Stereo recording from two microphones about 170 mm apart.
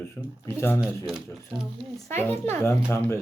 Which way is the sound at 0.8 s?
Centre (ahead or behind).